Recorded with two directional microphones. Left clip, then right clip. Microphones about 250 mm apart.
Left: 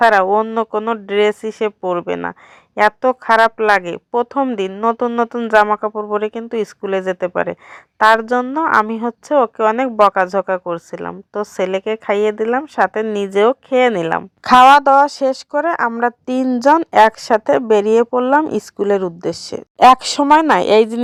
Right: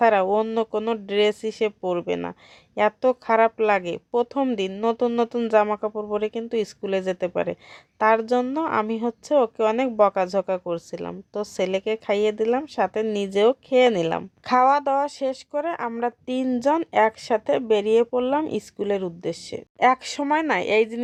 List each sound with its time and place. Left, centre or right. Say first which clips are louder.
0.0 s a woman's voice: left 7 dB; centre
14.4 s speech: left 11 dB; left